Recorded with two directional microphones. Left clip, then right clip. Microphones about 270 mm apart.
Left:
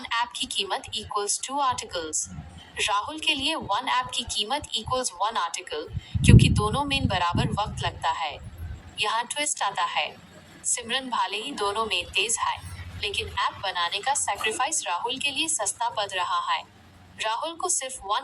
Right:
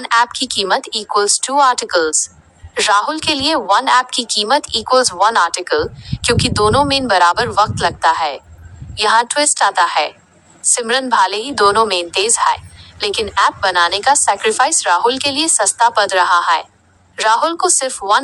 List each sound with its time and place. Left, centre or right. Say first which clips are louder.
0.0 s a woman's voice: right 13 dB; right